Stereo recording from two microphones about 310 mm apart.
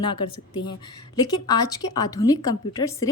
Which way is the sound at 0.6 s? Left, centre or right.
Centre.